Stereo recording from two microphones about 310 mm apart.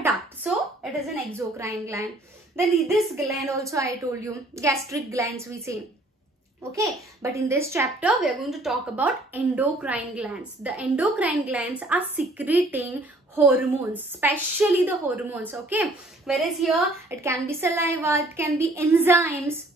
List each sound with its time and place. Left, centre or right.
0.0 s a sound: centre
1.6 s a woman's voice: centre
6.9 s a woman's voice: centre